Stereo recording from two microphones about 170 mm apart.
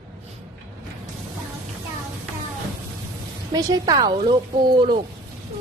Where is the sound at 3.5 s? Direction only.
25° right (ahead or behind).